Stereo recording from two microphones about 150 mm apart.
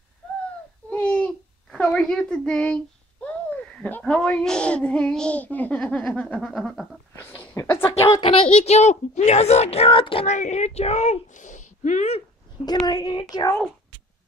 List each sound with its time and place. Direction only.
0.8 s a child's voice: 10° left (ahead or behind)
7.2 s a sound: 15° left (ahead or behind)
8.2 s a woman's voice: 35° left (ahead or behind)
10.2 s a woman's voice: 50° left (ahead or behind)
12.6 s speech: 25° left (ahead or behind)